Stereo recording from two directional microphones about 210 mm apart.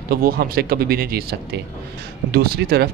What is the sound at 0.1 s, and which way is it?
Speech, 45° right (ahead or behind).